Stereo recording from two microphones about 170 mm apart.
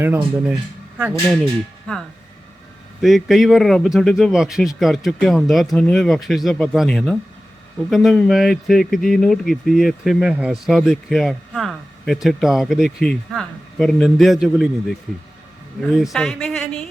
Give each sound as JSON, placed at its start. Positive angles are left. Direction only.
{"t": 0.0, "sound": "speech", "side_deg": -15}
{"t": 3.0, "sound": "speech", "side_deg": 0}